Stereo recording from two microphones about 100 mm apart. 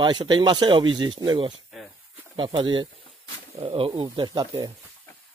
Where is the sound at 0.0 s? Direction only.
50° right (ahead or behind).